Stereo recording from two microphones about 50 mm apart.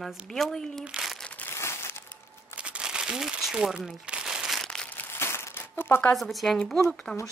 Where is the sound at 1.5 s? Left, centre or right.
Left.